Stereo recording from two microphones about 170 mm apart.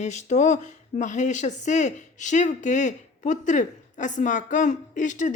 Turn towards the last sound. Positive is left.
turn(degrees=45)  # may be behind; listen again after turning